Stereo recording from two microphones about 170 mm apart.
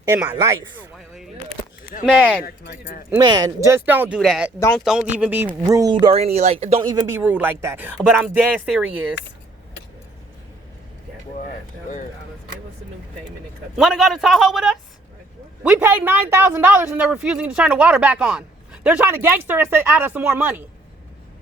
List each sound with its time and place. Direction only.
0.1 s speech: 10° right (ahead or behind)
0.9 s a sound: centre (ahead or behind)
2.1 s speech: 5° right (ahead or behind)
2.4 s speech: 60° left (ahead or behind)
3.2 s a man's voice: 25° right (ahead or behind)
6.8 s speech: 20° right (ahead or behind)
7.2 s speech: 10° right (ahead or behind)
13.7 s a man's voice: centre (ahead or behind)